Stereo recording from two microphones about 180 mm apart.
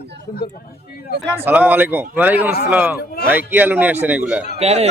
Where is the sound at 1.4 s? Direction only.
10° right (ahead or behind).